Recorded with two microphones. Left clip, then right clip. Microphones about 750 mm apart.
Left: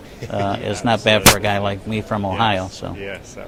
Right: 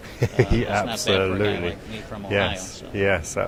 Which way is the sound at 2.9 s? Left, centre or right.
Right.